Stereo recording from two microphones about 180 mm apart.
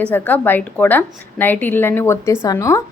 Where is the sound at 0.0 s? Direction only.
10° left (ahead or behind).